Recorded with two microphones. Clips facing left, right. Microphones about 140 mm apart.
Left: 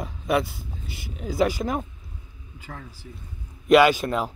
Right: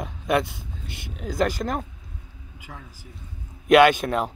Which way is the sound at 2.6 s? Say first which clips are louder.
Left 3 dB; 10° right (ahead or behind).